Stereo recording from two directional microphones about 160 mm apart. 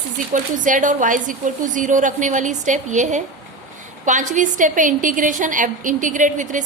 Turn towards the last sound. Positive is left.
turn(degrees=-50)  # may be behind; listen again after turning